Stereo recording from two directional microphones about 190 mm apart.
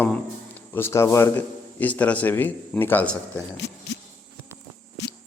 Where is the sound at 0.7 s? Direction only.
10° left (ahead or behind).